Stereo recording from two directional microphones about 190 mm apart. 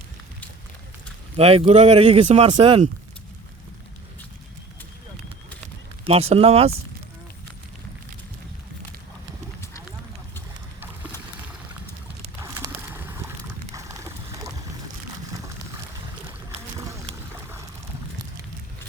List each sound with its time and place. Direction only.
1.4 s speech: 30° right (ahead or behind)
6.1 s speech: 30° right (ahead or behind)
12.4 s a sound: 10° right (ahead or behind)
17.3 s boat: 10° right (ahead or behind)